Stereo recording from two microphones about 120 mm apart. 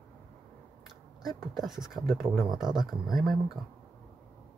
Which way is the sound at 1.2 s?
Centre (ahead or behind).